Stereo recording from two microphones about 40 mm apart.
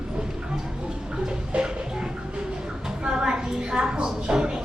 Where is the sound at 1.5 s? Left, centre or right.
Right.